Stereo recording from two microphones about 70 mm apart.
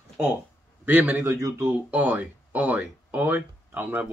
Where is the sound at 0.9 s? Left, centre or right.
Right.